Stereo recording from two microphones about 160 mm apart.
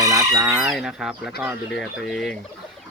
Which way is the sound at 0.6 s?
Centre (ahead or behind).